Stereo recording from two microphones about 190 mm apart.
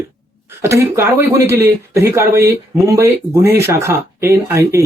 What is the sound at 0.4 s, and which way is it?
Speech, 15° right (ahead or behind).